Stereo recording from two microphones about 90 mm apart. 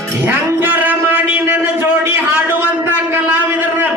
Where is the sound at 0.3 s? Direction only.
20° right (ahead or behind).